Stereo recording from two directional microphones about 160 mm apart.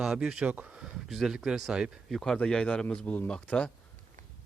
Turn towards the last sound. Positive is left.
turn(degrees=5)  # may be behind; listen again after turning